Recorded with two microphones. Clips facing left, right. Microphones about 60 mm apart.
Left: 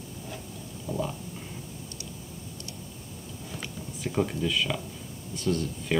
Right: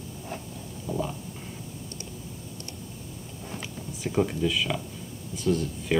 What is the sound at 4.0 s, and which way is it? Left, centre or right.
Speech, centre.